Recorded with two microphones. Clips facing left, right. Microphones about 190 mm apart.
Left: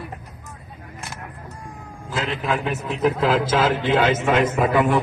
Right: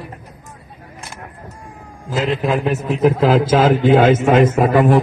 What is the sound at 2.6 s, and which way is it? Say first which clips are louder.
A man's voice: right 6 dB; 40° right (ahead or behind).